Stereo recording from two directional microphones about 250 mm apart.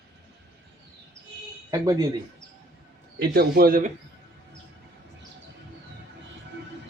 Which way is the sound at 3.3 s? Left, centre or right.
Right.